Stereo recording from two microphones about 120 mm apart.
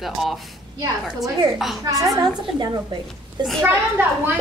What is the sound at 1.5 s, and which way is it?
Speech, centre (ahead or behind).